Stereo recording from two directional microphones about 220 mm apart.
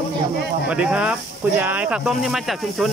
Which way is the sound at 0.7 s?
5° right (ahead or behind).